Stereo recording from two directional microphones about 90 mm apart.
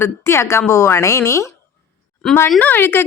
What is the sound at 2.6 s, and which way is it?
Speech, 20° left (ahead or behind).